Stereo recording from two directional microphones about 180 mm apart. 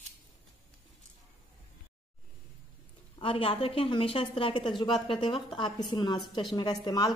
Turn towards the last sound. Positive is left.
turn(degrees=20)  # may be behind; listen again after turning